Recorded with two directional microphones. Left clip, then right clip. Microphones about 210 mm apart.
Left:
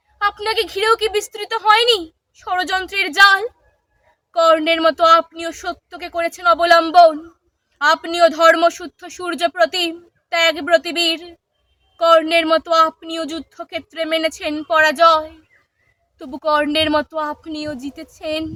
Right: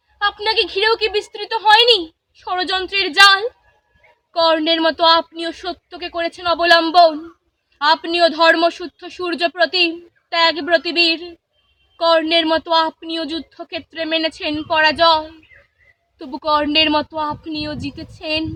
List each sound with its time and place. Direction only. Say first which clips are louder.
0.2 s speech: right 1 dB; 30° left (ahead or behind)
16.4 s speech: right 1 dB; 25° left (ahead or behind)